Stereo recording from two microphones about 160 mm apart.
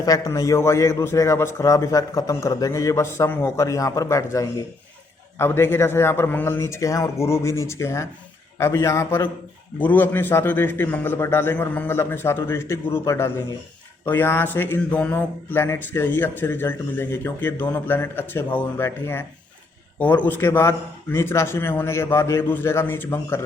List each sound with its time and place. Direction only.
0.0 s a man's voice: 20° left (ahead or behind)